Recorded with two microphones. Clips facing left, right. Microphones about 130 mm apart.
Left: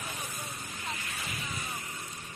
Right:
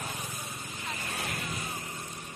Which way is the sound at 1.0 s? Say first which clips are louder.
Right 4 dB; 55° right (ahead or behind).